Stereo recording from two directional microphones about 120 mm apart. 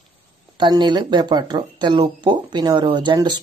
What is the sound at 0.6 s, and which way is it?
Speech, 40° right (ahead or behind).